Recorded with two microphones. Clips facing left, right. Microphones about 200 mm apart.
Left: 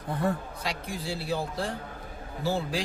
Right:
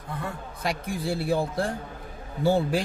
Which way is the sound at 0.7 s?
55° right (ahead or behind).